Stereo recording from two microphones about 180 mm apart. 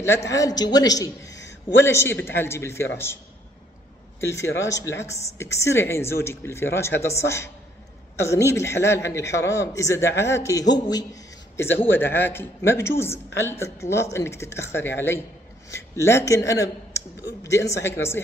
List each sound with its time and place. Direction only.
0.3 s a woman's voice: 20° left (ahead or behind)
4.2 s a woman's voice: 15° left (ahead or behind)